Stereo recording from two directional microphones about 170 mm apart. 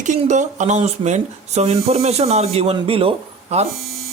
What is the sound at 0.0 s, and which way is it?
Speech, 45° right (ahead or behind).